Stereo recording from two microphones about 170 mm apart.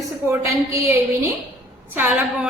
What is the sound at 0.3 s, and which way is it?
A woman's voice, 15° right (ahead or behind).